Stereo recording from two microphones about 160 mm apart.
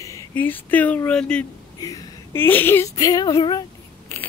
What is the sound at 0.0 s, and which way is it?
Speech, 15° left (ahead or behind).